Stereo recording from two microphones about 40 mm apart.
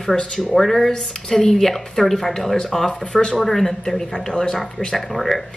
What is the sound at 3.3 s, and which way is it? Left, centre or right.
Speech, centre.